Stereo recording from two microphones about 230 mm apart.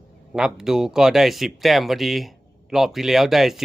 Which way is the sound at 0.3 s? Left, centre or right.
Centre.